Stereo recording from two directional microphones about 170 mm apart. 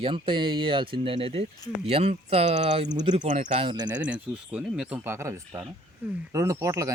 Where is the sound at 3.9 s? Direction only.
10° right (ahead or behind).